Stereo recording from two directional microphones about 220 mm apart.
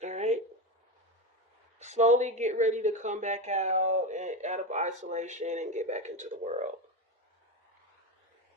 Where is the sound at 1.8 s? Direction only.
30° right (ahead or behind).